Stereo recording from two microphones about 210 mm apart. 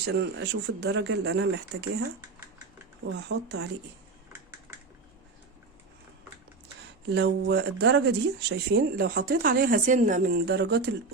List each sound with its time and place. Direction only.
0.0 s speech: 55° right (ahead or behind)
3.2 s speech: 55° right (ahead or behind)
7.1 s speech: 55° right (ahead or behind)